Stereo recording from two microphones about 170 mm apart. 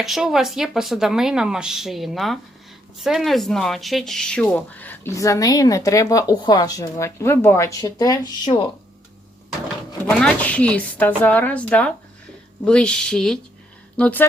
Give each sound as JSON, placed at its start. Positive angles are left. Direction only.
{"t": 0.0, "sound": "speech", "side_deg": 0}
{"t": 10.1, "sound": "speech", "side_deg": 5}